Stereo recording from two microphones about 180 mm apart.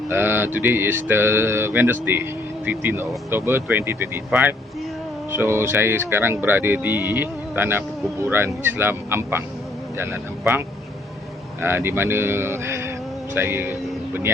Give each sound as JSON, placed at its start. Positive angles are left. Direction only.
{"t": 0.1, "sound": "speech", "side_deg": -10}
{"t": 11.6, "sound": "speech", "side_deg": -15}